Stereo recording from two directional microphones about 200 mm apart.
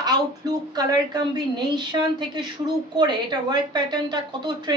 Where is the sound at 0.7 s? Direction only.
20° right (ahead or behind).